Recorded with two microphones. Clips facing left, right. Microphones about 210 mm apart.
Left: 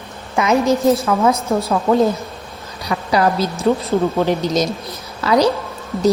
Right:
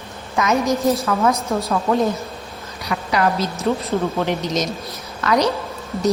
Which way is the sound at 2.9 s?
35° left (ahead or behind).